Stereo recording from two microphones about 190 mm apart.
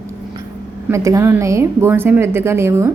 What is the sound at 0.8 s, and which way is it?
A woman's voice, 15° right (ahead or behind).